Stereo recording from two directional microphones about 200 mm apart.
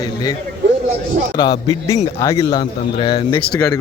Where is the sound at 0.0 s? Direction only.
20° left (ahead or behind).